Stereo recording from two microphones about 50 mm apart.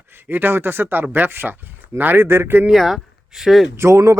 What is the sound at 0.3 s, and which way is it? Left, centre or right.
Speech, right.